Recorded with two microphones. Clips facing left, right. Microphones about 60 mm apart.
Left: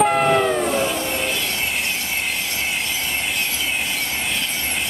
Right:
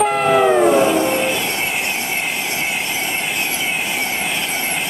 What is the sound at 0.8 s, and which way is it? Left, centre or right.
Vehicle, right.